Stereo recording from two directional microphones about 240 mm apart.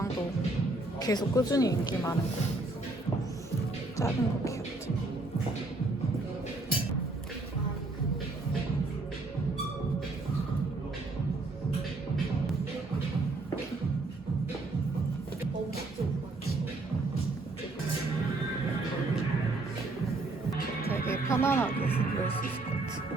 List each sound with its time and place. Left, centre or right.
0.9 s speech: centre
3.9 s speech: centre
20.9 s music: centre
21.8 s music: left